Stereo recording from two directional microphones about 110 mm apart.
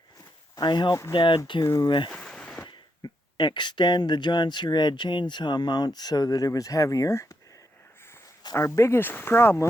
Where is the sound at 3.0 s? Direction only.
45° left (ahead or behind); by 7.4 s 30° left (ahead or behind).